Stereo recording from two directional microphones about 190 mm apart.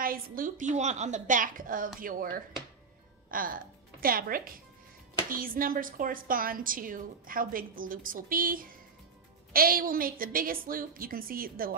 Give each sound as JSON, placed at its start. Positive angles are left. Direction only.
{"t": 0.0, "sound": "a woman's voice", "side_deg": -50}